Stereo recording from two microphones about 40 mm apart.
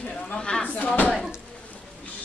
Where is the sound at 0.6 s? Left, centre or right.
Left.